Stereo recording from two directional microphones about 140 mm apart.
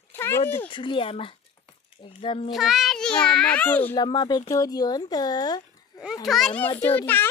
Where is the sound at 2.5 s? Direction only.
Centre (ahead or behind).